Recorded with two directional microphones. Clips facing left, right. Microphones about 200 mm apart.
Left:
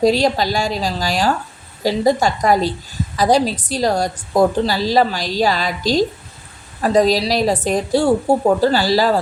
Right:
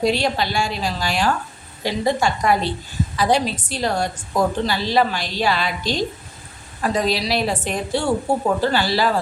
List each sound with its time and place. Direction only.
0.0 s a woman's voice: 40° left (ahead or behind)